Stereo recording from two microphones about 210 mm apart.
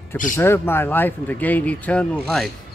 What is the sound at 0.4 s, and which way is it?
Speech, 10° left (ahead or behind).